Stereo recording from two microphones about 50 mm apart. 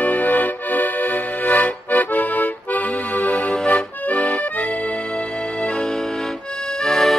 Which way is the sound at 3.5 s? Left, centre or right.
Centre.